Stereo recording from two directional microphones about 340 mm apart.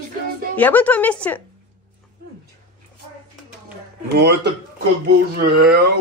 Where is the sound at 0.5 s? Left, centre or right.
Centre.